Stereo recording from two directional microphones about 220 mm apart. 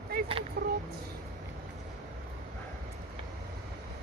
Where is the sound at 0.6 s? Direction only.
45° right (ahead or behind).